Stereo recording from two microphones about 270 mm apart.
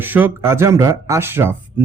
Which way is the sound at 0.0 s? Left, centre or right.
Centre.